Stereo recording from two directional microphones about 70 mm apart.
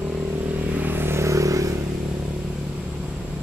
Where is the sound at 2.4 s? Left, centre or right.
Centre.